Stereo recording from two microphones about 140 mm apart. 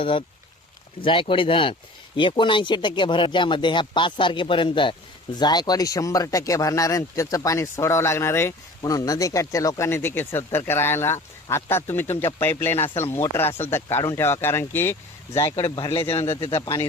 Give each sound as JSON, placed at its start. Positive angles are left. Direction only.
{"t": 0.0, "sound": "speech", "side_deg": 40}
{"t": 15.6, "sound": "speech", "side_deg": 35}